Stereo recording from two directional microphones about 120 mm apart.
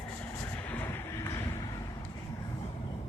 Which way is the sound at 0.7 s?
20° left (ahead or behind).